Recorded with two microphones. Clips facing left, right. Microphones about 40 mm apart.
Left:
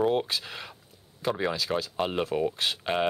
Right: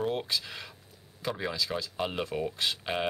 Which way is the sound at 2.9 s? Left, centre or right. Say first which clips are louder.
Left 6 dB; left.